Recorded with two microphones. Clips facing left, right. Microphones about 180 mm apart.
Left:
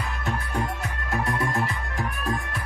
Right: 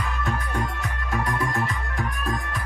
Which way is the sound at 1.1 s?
30° left (ahead or behind).